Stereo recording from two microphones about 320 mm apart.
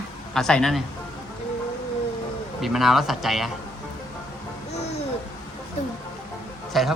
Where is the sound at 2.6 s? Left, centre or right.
Centre.